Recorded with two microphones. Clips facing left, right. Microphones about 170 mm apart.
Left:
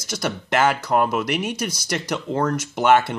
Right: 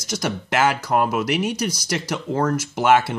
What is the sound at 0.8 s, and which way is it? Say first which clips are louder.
Speech: even; 10° right (ahead or behind).